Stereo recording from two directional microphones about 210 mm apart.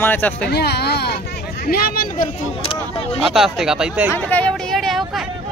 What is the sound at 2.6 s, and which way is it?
Speech, 25° left (ahead or behind).